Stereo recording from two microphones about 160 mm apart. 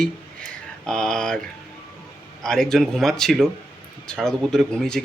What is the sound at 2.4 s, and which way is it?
Speech, 5° left (ahead or behind).